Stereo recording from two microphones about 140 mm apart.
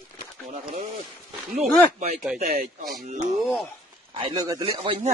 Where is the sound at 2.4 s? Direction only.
75° right (ahead or behind); by 3.4 s 60° right (ahead or behind).